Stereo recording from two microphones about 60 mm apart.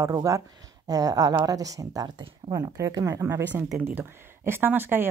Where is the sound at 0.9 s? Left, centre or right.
Right.